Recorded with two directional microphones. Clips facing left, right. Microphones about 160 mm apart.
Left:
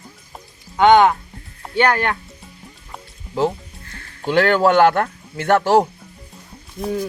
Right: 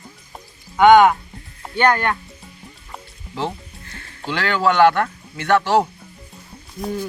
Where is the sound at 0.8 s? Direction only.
25° left (ahead or behind).